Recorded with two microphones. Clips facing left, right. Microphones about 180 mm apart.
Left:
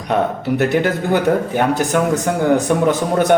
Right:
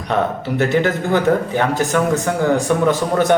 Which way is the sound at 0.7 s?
15° left (ahead or behind).